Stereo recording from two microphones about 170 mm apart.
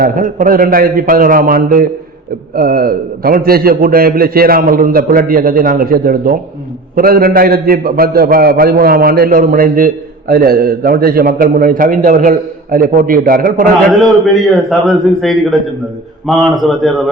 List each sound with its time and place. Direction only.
0.0 s a man's voice: 55° right (ahead or behind)
14.0 s a man's voice: centre (ahead or behind)